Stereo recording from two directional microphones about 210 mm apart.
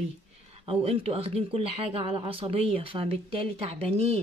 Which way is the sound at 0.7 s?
30° right (ahead or behind).